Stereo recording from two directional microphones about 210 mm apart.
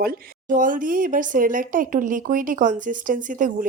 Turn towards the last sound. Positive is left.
turn(degrees=-40)  # may be behind; listen again after turning